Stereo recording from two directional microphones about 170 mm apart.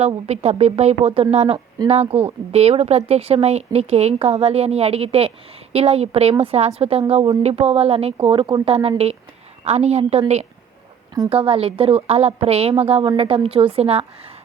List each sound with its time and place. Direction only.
0.3 s a woman's voice: 40° right (ahead or behind)